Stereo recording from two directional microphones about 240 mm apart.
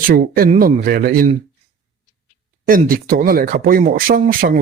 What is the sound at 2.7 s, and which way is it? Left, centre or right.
Speech, right.